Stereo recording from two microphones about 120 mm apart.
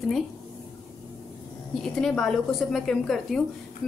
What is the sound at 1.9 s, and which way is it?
A woman's voice, 5° left (ahead or behind).